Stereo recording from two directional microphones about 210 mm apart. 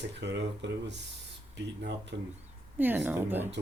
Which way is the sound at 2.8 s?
10° right (ahead or behind).